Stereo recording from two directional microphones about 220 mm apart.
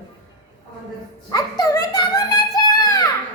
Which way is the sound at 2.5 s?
15° left (ahead or behind).